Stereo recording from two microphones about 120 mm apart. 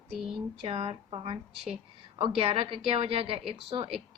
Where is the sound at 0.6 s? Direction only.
55° right (ahead or behind).